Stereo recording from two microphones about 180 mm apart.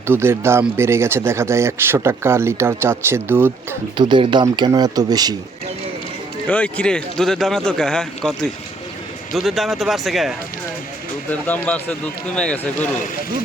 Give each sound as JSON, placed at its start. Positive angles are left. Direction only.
{"t": 0.1, "sound": "speech", "side_deg": -15}
{"t": 3.9, "sound": "speech", "side_deg": -25}
{"t": 6.5, "sound": "a man's voice", "side_deg": 5}